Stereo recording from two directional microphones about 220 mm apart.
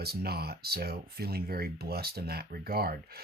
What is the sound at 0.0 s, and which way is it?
Speech, 45° right (ahead or behind).